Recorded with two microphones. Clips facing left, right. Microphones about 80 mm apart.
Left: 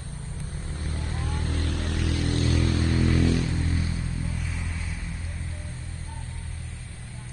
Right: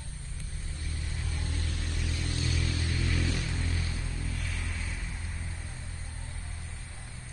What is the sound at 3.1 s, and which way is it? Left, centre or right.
Vehicle, left.